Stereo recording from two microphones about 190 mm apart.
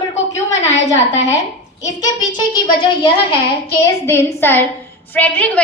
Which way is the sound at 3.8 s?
15° left (ahead or behind).